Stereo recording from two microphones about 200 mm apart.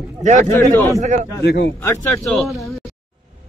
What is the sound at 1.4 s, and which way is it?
Speech, 55° left (ahead or behind).